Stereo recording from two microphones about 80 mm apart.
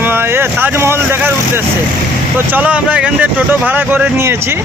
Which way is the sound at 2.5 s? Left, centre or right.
Centre.